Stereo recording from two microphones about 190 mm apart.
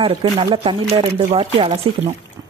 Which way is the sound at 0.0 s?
30° right (ahead or behind).